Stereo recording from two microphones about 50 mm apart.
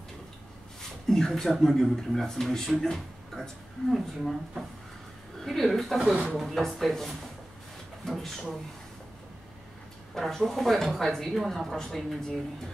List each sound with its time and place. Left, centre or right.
1.0 s a woman's voice: centre
6.0 s speech: centre
6.3 s speech: centre
10.1 s speech: centre